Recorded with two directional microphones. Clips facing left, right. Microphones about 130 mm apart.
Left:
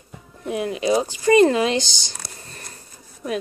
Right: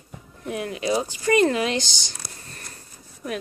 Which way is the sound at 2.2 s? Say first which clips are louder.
Left 1 dB; 90° left.